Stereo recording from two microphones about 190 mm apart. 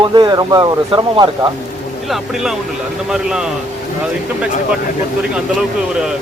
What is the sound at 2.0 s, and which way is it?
Speech, centre (ahead or behind).